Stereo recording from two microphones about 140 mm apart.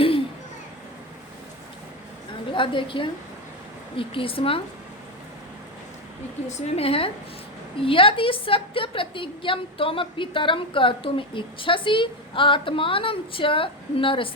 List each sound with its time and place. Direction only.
2.5 s a woman's voice: 35° left (ahead or behind)
6.5 s a woman's voice: 45° left (ahead or behind)